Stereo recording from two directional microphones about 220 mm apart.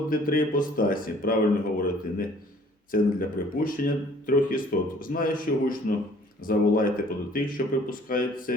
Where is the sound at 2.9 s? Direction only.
40° left (ahead or behind).